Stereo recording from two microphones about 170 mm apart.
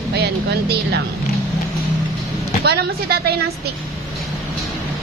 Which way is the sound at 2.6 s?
70° right (ahead or behind).